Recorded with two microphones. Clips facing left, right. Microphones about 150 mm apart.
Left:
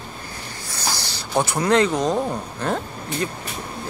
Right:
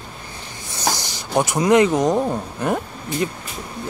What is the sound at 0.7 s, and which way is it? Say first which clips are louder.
Speech: right 5 dB; 20° right (ahead or behind).